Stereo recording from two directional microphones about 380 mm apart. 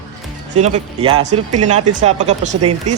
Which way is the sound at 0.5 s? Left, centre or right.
Centre.